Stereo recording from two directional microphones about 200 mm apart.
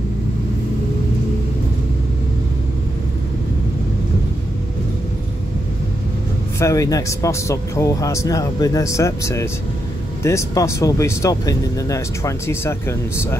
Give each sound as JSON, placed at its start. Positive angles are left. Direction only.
{"t": 6.6, "sound": "speech", "side_deg": 15}